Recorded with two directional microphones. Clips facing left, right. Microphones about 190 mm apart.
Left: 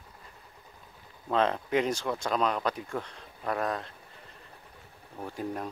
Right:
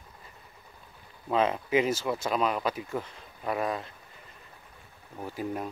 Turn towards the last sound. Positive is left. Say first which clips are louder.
# right 1 dB
turn(degrees=-5)  # may be behind; listen again after turning